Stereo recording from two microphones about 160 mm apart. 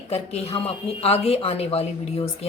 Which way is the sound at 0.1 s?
40° left (ahead or behind).